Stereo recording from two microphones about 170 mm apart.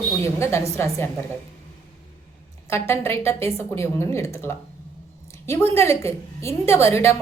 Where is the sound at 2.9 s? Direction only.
15° left (ahead or behind).